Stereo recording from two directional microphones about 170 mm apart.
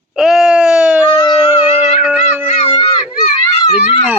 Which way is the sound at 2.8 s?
40° left (ahead or behind).